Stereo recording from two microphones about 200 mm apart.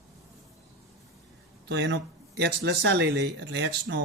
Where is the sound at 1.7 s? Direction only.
60° right (ahead or behind).